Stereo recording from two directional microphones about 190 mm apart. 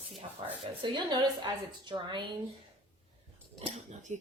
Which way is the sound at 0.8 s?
25° right (ahead or behind).